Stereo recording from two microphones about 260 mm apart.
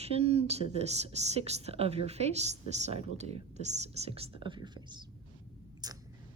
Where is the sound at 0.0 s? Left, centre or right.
Right.